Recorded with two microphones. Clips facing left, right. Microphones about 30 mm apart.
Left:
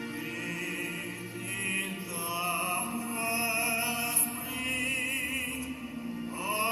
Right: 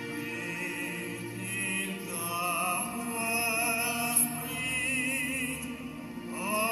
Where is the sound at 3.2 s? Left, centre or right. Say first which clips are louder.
Right 1 dB; left.